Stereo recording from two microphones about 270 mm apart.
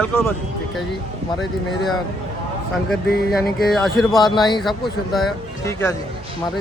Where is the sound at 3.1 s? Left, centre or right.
Left.